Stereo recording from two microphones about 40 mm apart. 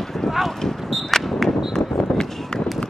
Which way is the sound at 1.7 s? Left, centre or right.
Centre.